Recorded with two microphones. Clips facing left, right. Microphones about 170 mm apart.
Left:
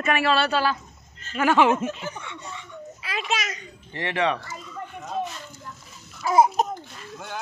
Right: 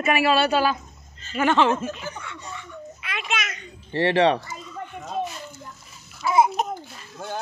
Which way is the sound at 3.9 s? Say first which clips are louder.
Right 6 dB; 35° right (ahead or behind).